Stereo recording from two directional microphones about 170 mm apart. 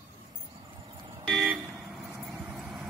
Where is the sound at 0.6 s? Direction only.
25° right (ahead or behind).